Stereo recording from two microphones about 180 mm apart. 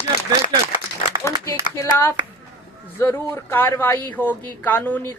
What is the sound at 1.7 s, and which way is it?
Speech, 15° left (ahead or behind).